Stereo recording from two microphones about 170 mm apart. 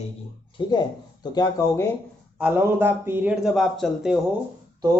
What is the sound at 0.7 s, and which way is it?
Speech, 25° left (ahead or behind).